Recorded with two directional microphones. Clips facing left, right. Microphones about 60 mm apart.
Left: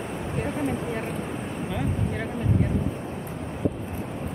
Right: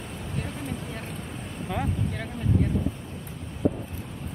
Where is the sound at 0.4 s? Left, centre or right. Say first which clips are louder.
Left 7 dB; left.